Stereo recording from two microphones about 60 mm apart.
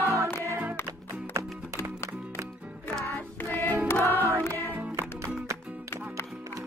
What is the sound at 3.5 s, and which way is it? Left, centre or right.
Choir, left.